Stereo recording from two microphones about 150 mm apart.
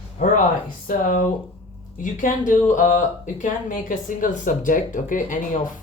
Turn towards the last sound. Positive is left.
turn(degrees=60)  # may be behind; listen again after turning